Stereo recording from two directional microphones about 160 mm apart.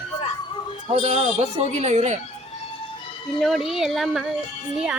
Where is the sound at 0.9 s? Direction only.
40° right (ahead or behind).